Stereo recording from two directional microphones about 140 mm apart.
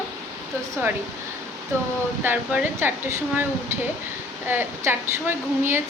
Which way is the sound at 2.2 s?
10° right (ahead or behind).